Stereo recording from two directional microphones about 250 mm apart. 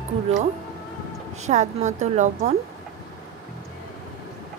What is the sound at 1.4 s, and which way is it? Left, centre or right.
Speech, right.